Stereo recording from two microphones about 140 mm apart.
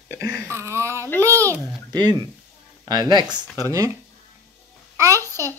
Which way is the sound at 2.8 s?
25° right (ahead or behind).